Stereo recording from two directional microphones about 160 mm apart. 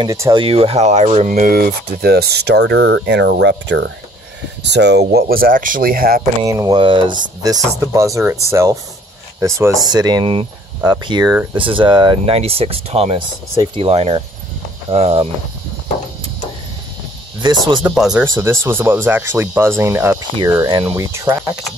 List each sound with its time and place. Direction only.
0.0 s speech: 25° right (ahead or behind)
0.4 s speech: 35° right (ahead or behind); by 6.2 s 65° right (ahead or behind)
6.4 s speech: 20° right (ahead or behind)
6.8 s speech: 30° right (ahead or behind)
17.4 s speech: 30° right (ahead or behind)
17.8 s speech: 5° right (ahead or behind)
18.2 s speech: 15° right (ahead or behind)